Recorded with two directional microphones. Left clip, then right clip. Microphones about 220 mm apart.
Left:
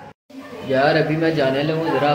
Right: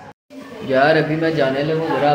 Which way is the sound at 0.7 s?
15° right (ahead or behind).